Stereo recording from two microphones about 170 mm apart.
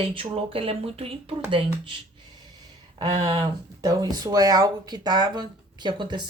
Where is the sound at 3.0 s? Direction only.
30° right (ahead or behind).